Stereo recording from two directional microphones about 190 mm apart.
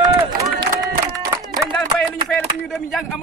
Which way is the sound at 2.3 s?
Centre (ahead or behind).